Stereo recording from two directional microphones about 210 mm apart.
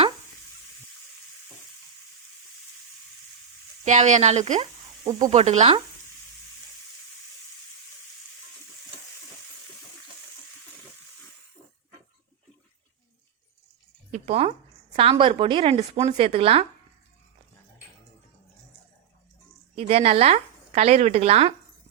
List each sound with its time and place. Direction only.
3.8 s a woman's voice: 35° right (ahead or behind)
14.1 s a sound: 30° right (ahead or behind)
15.1 s a woman's voice: 25° right (ahead or behind)
19.7 s a woman's voice: 30° right (ahead or behind)